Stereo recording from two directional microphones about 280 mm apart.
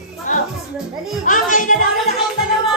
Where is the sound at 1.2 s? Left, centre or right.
Left.